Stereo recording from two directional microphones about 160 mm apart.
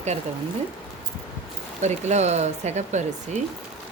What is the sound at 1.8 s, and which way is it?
Speech, 45° right (ahead or behind).